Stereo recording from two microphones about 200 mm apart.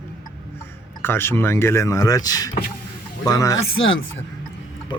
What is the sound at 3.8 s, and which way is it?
Speech, 70° left (ahead or behind).